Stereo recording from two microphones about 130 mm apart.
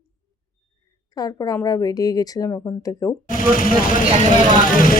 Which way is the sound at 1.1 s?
30° left (ahead or behind).